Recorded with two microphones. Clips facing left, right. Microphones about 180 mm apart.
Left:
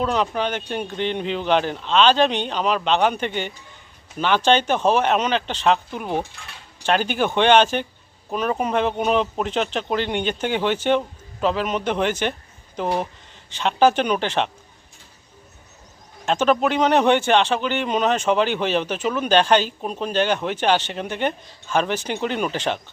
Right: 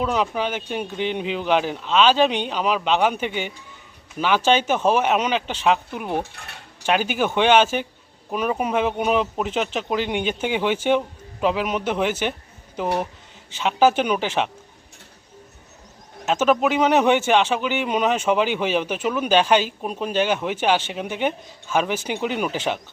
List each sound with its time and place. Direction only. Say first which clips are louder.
0.0 s a man's voice: left 1 dB; 5° right (ahead or behind)
6.3 s speech: right 1 dB; 60° right (ahead or behind)
6.8 s a man's voice: left 1 dB; 10° right (ahead or behind)
16.2 s a man's voice: even; 5° right (ahead or behind)